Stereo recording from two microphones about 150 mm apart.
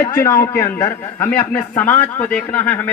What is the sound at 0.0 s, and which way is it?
A man's voice, 20° left (ahead or behind).